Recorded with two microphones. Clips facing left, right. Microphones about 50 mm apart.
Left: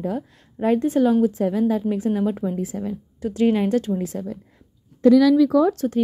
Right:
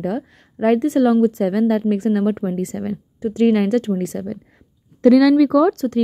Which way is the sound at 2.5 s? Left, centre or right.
Right.